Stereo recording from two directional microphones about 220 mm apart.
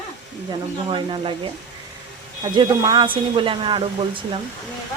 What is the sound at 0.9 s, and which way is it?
Speech, 25° right (ahead or behind).